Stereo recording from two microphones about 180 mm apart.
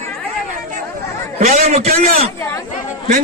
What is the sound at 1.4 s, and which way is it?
Speech, 40° right (ahead or behind).